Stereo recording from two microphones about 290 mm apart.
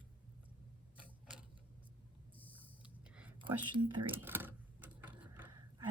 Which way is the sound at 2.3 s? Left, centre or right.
Centre.